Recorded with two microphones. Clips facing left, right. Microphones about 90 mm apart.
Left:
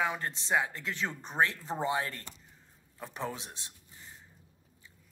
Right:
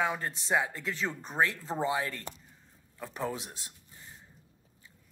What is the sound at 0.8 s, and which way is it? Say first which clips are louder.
Speech: right 1 dB; 20° left (ahead or behind).